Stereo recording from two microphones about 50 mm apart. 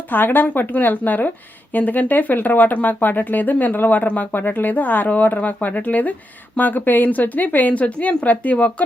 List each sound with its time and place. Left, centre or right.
0.1 s speech: left